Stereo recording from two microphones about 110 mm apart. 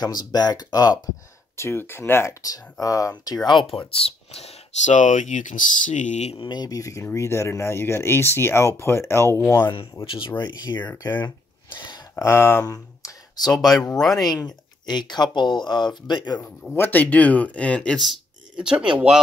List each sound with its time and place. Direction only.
0.0 s speech: 40° left (ahead or behind)
1.6 s speech: 20° left (ahead or behind)
3.7 s speech: 55° left (ahead or behind); by 6.3 s 90° left
6.3 s speech: 45° left (ahead or behind); by 9.3 s 25° left (ahead or behind)
9.6 s speech: 45° left (ahead or behind)
11.1 s a sound: 45° left (ahead or behind)
12.2 s speech: 25° left (ahead or behind)
13.5 s speech: 5° left (ahead or behind)
14.1 s speech: 35° left (ahead or behind)
16.7 s speech: 15° left (ahead or behind); by 19.1 s 10° right (ahead or behind)